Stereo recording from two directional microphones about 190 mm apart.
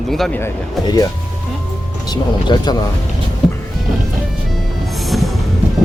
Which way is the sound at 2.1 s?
20° left (ahead or behind).